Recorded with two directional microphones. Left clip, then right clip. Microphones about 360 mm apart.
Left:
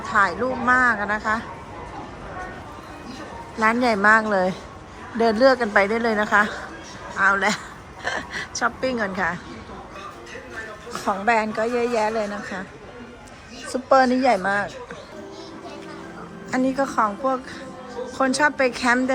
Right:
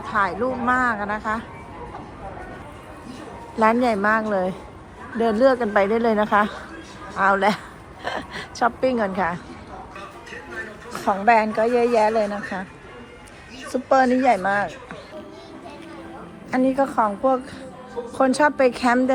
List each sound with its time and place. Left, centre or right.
0.1 s a woman's voice: centre
3.6 s a woman's voice: centre
10.9 s a woman's voice: centre
13.7 s a woman's voice: centre
16.5 s a woman's voice: centre